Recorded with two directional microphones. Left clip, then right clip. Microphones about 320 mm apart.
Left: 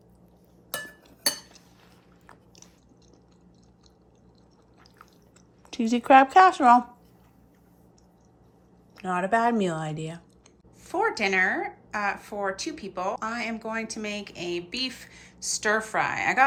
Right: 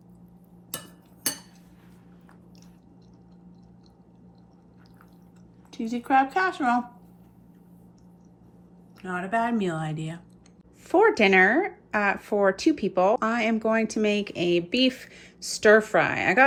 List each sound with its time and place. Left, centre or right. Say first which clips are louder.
5.7 s speech: left 5 dB; left
9.0 s a woman's voice: left 3 dB; centre
10.8 s speech: right 6 dB; centre